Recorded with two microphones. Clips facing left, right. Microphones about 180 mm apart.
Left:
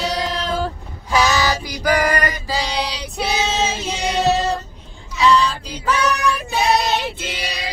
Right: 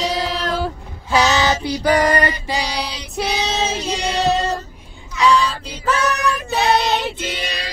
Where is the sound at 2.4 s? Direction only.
15° right (ahead or behind).